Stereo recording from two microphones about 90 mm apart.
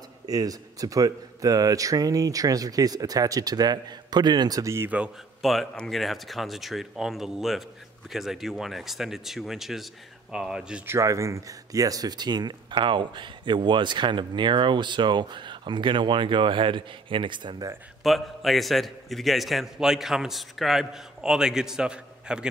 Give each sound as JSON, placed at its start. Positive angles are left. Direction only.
{"t": 0.3, "sound": "speech", "side_deg": -45}
{"t": 5.4, "sound": "a man's voice", "side_deg": 0}
{"t": 10.9, "sound": "speech", "side_deg": -35}
{"t": 18.0, "sound": "a man's voice", "side_deg": 0}